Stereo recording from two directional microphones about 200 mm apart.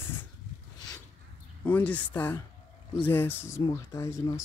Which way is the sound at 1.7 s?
10° left (ahead or behind).